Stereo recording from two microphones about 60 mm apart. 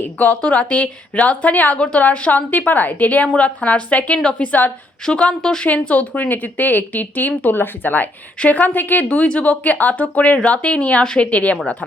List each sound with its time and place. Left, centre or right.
0.0 s a woman's voice: left
5.6 s speech: left